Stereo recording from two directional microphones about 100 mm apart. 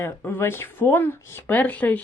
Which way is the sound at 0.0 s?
20° left (ahead or behind).